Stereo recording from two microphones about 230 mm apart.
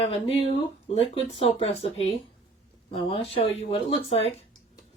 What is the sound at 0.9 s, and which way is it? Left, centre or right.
Speech, left.